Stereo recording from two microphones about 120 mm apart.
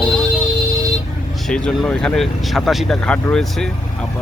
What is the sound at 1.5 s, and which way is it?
Speech, 5° left (ahead or behind).